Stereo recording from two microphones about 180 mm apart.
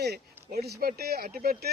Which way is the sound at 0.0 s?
65° right (ahead or behind).